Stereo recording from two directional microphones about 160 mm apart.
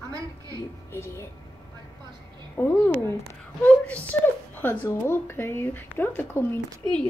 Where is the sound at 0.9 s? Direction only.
15° left (ahead or behind).